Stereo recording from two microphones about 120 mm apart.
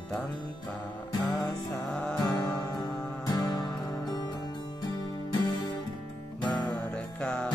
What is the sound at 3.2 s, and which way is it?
Music, 35° left (ahead or behind).